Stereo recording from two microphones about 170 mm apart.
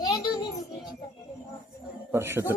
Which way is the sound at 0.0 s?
20° left (ahead or behind).